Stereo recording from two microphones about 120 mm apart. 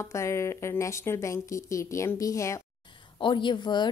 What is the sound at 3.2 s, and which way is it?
Speech, 45° left (ahead or behind).